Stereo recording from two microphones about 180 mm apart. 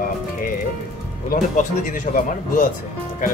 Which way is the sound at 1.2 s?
45° left (ahead or behind).